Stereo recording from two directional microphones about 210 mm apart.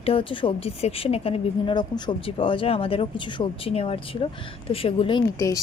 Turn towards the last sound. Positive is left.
turn(degrees=20)  # may be behind; listen again after turning